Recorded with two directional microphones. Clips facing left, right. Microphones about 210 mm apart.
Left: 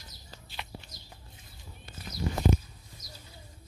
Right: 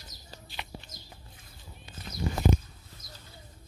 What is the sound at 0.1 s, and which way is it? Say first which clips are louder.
Bird: right 1 dB; 40° right (ahead or behind).